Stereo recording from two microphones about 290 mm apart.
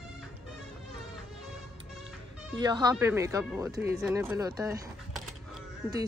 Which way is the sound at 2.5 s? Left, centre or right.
Centre.